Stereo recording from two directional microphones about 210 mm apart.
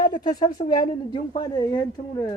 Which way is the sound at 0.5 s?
40° left (ahead or behind).